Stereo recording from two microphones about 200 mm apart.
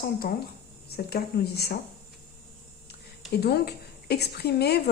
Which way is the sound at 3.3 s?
55° left (ahead or behind).